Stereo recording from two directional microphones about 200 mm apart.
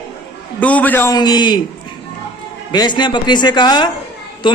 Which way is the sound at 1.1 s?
20° left (ahead or behind).